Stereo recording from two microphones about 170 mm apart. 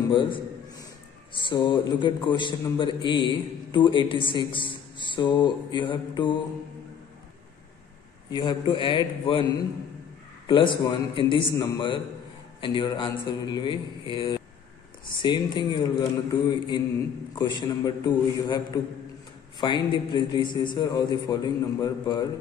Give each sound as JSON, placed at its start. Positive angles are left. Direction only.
{"t": 0.1, "sound": "a sound", "side_deg": 30}
{"t": 1.3, "sound": "a man's voice", "side_deg": 30}
{"t": 8.3, "sound": "a man's voice", "side_deg": 25}